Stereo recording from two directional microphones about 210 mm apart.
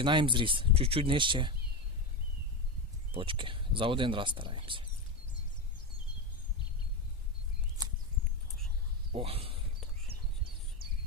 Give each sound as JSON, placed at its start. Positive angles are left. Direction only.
{"t": 0.0, "sound": "speech", "side_deg": -25}
{"t": 3.1, "sound": "speech", "side_deg": -25}
{"t": 9.1, "sound": "speech", "side_deg": -25}